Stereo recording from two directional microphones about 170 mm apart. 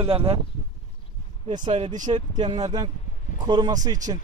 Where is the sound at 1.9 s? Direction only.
45° right (ahead or behind).